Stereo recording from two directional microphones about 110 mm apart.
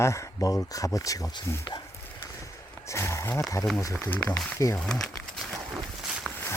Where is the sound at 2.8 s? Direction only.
25° left (ahead or behind).